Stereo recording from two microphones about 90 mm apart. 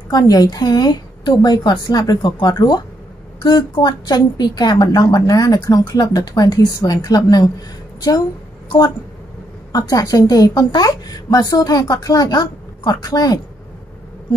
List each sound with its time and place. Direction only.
0.1 s a woman's voice: 45° left (ahead or behind)
9.7 s a woman's voice: 45° left (ahead or behind)